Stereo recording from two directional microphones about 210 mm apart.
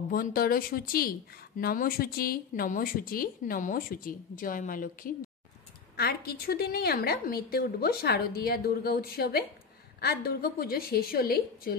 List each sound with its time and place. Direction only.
0.1 s speech: 45° left (ahead or behind)